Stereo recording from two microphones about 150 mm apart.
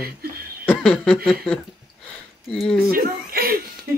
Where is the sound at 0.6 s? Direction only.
10° left (ahead or behind).